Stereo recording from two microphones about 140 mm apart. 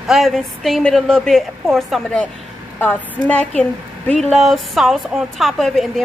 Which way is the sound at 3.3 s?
10° left (ahead or behind).